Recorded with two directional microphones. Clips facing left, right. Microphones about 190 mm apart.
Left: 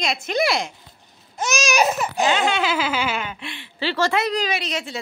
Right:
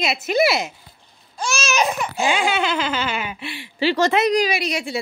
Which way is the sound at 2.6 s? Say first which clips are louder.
Even; 5° left (ahead or behind).